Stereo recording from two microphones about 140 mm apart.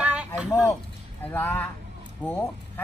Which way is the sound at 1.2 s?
10° left (ahead or behind).